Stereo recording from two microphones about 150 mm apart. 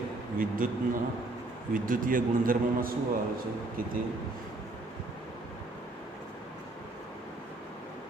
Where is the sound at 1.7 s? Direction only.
65° right (ahead or behind).